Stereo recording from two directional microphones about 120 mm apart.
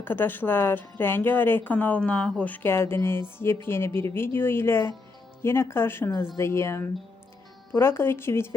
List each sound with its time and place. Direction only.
0.0 s speech: 15° left (ahead or behind)